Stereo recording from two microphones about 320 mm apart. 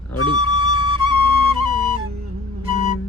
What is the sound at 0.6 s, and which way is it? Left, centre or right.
Flute, left.